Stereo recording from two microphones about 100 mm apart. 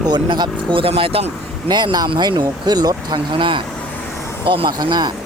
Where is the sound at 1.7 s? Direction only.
45° right (ahead or behind).